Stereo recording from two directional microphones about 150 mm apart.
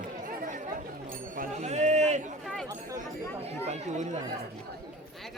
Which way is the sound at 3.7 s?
50° right (ahead or behind).